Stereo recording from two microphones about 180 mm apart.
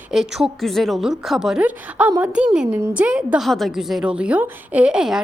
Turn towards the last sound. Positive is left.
turn(degrees=-5)  # may be behind; listen again after turning